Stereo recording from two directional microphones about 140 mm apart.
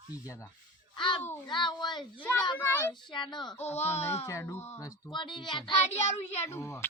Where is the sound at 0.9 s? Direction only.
35° left (ahead or behind).